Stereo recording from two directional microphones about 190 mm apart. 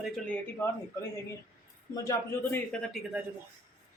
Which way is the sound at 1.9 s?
15° left (ahead or behind).